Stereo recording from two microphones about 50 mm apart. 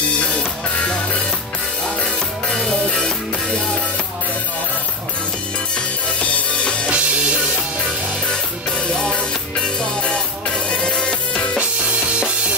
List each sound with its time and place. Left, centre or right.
0.2 s music: centre
6.3 s music: left
9.0 s music: centre